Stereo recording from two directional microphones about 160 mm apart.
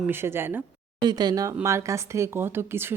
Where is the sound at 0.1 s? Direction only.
15° right (ahead or behind).